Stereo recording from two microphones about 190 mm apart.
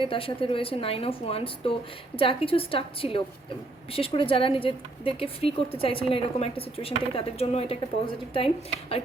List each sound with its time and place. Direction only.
0.0 s a woman's voice: 30° left (ahead or behind)